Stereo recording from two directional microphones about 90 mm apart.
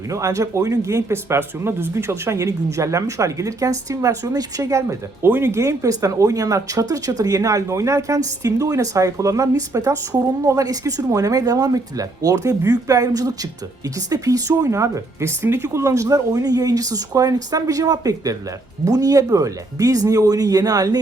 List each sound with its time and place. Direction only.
0.1 s speech: 35° right (ahead or behind)